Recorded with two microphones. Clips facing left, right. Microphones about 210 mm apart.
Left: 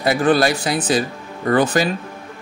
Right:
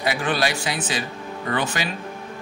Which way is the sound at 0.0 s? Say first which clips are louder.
Left 7 dB; 40° left (ahead or behind).